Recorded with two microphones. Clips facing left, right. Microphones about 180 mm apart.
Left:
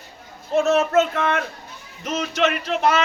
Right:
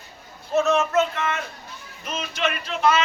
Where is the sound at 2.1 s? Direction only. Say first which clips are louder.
Left 5 dB; 70° left (ahead or behind).